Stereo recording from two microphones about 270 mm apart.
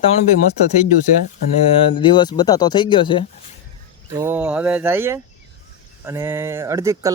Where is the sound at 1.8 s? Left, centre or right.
Centre.